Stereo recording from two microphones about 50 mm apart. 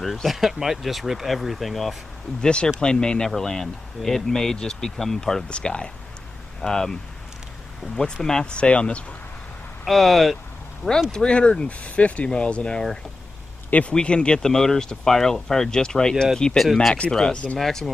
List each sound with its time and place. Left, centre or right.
0.0 s speech: centre
2.4 s speech: centre
5.5 s speech: centre
9.8 s speech: centre
11.1 s speech: centre
13.9 s speech: centre